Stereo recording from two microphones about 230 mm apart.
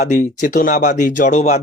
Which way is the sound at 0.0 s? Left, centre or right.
Left.